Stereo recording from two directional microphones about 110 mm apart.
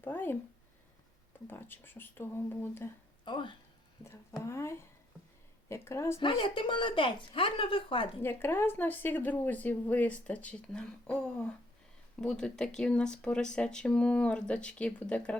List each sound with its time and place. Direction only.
0.0 s speech: 20° left (ahead or behind)
1.5 s speech: 20° left (ahead or behind)
3.2 s a woman's voice: 45° left (ahead or behind)
4.4 s speech: 25° left (ahead or behind)
6.1 s a woman's voice: 55° left (ahead or behind)
8.2 s speech: 20° left (ahead or behind)